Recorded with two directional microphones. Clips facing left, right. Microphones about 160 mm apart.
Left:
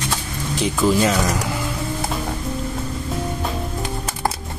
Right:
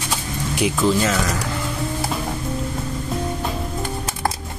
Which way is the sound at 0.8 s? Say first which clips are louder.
Left 1 dB; 5° left (ahead or behind).